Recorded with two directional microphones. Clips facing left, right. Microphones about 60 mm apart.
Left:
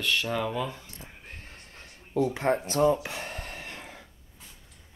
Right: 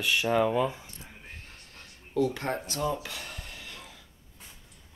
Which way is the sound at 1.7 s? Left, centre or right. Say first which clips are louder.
Left 1 dB; left.